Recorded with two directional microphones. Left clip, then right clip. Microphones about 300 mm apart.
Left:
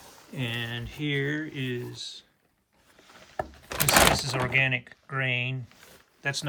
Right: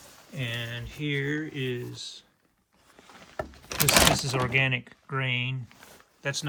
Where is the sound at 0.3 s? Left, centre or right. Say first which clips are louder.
Left 1 dB; centre.